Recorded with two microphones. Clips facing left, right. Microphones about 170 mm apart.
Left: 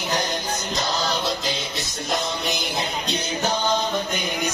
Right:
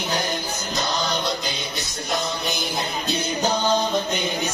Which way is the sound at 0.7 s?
Centre (ahead or behind).